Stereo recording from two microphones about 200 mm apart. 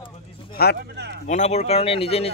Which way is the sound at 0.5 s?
50° left (ahead or behind).